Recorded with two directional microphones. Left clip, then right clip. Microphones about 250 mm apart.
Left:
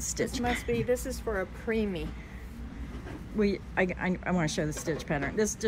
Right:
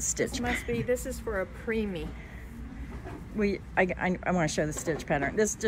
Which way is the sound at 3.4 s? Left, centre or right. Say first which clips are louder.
Right 1 dB; centre.